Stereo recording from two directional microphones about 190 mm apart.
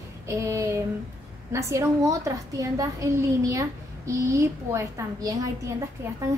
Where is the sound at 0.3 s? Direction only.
15° right (ahead or behind).